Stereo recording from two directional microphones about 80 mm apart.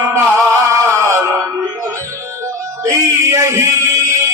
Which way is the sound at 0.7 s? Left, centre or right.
Right.